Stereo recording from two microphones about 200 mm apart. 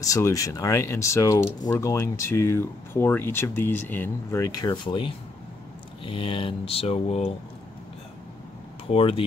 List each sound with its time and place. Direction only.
0.0 s speech: 15° left (ahead or behind)
8.9 s speech: 25° left (ahead or behind)